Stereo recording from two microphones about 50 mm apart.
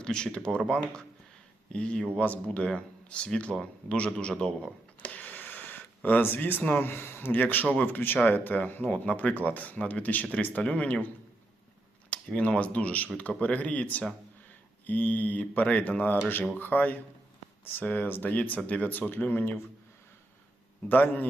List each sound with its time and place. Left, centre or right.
0.0 s speech: centre
1.7 s speech: centre
5.1 s a sound: left
6.8 s speech: left
7.3 s speech: left
12.1 s speech: left
20.9 s speech: left